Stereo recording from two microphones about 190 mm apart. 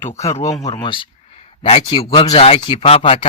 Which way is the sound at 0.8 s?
25° left (ahead or behind).